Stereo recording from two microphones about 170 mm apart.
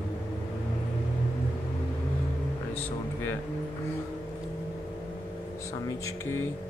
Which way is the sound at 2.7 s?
10° left (ahead or behind).